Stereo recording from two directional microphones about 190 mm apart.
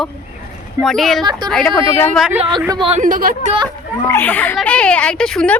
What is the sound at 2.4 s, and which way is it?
Speech, 25° right (ahead or behind).